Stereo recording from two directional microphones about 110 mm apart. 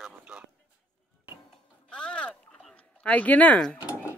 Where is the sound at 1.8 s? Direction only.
10° left (ahead or behind).